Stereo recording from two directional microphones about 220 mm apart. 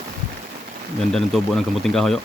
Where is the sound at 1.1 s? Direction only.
Centre (ahead or behind).